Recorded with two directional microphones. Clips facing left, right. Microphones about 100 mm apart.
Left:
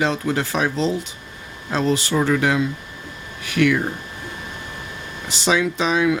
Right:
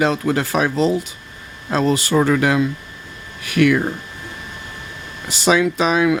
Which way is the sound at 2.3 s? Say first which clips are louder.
Right 2 dB; 60° right (ahead or behind).